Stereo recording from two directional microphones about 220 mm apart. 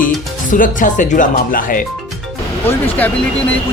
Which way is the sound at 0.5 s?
35° left (ahead or behind).